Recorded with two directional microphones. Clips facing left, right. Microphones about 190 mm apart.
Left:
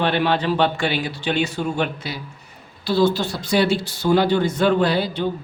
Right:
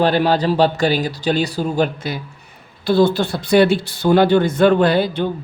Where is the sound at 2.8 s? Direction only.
55° right (ahead or behind).